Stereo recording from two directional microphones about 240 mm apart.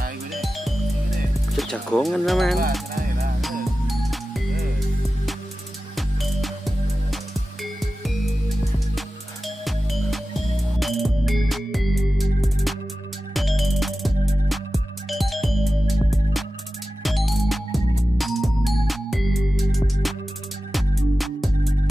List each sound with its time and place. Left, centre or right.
0.3 s music: centre
1.6 s speech: centre
2.9 s music: right
3.8 s music: centre
5.9 s music: centre
9.7 s music: centre